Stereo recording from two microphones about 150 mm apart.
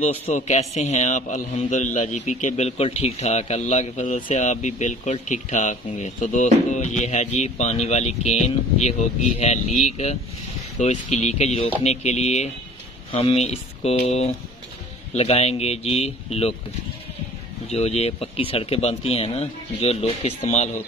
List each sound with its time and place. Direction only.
0.0 s a man's voice: 50° left (ahead or behind)
17.6 s speech: 45° left (ahead or behind)